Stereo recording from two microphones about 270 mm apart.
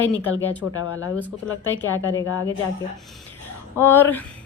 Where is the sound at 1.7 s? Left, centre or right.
Left.